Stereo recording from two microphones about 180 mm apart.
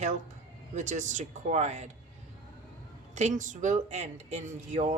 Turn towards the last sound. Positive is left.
turn(degrees=-40)  # may be behind; listen again after turning